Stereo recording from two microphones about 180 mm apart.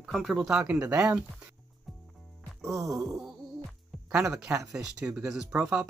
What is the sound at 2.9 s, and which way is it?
Speech, 5° right (ahead or behind).